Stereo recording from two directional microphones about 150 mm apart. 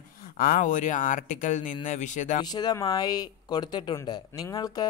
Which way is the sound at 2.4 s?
25° left (ahead or behind).